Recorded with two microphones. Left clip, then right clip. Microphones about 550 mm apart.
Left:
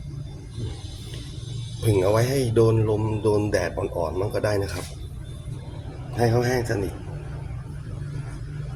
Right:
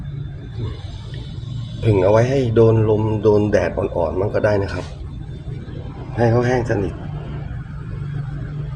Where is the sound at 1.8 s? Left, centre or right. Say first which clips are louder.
Right 6 dB; left.